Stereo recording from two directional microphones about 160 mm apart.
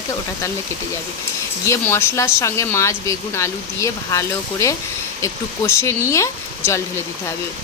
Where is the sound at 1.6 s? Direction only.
15° left (ahead or behind).